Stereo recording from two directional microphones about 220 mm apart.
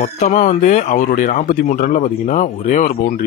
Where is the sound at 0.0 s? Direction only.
35° left (ahead or behind).